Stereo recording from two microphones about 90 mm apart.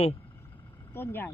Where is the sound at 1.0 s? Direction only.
25° left (ahead or behind).